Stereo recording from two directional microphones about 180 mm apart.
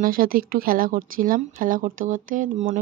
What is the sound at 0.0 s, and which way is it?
Speech, 50° right (ahead or behind).